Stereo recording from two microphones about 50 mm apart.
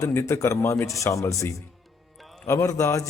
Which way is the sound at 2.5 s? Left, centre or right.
Left.